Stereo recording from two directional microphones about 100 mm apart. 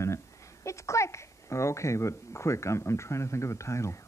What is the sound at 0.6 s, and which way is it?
Speech, 30° left (ahead or behind).